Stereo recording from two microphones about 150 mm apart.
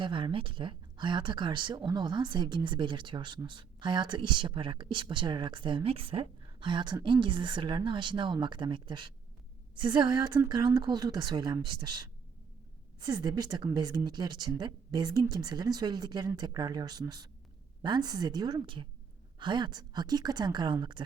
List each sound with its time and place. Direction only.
0.0 s a woman's voice: 35° right (ahead or behind)
13.0 s a woman's voice: 30° right (ahead or behind)